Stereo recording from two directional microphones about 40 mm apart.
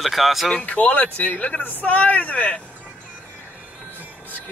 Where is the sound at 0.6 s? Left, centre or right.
Left.